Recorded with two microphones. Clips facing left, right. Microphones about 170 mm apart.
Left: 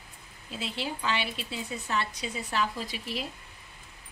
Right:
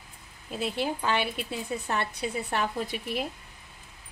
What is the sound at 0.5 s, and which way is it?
Speech, 50° right (ahead or behind).